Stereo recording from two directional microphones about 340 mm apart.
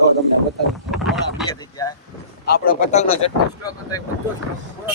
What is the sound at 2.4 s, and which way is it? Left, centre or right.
Speech, left.